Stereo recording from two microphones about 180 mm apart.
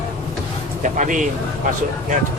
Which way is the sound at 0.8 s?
45° right (ahead or behind).